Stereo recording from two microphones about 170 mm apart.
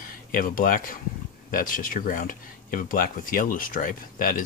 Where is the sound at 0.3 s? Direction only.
55° left (ahead or behind).